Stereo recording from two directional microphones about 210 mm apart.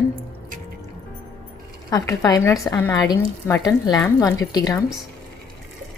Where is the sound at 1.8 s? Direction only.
15° left (ahead or behind).